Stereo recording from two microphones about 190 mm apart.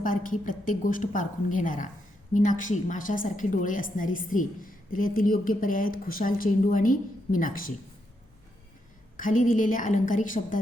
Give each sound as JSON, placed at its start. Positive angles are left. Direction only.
{"t": 0.0, "sound": "a woman's voice", "side_deg": 45}
{"t": 9.1, "sound": "a woman's voice", "side_deg": 45}